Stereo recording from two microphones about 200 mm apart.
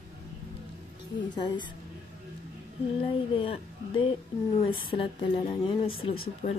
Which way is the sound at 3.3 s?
25° left (ahead or behind).